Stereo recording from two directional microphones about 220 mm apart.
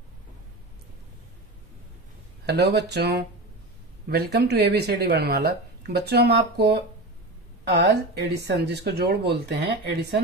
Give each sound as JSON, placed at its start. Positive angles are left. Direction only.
{"t": 2.4, "sound": "speech", "side_deg": -50}